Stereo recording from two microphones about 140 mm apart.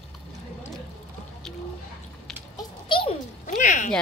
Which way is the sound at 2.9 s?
35° left (ahead or behind).